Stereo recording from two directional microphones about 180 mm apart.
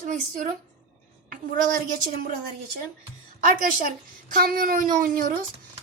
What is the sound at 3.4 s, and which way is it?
Speech, 50° right (ahead or behind).